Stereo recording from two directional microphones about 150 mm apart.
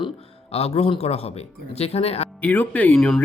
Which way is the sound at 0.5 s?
40° left (ahead or behind).